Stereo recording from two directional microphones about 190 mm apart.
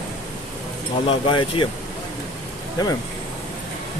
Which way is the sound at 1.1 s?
25° left (ahead or behind).